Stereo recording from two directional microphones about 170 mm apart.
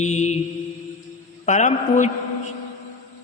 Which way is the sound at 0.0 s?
45° left (ahead or behind).